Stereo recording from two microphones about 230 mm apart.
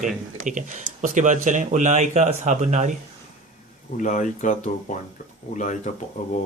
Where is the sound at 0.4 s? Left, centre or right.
Right.